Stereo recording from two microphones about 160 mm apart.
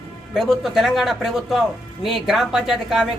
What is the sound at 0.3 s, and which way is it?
Speech, centre (ahead or behind).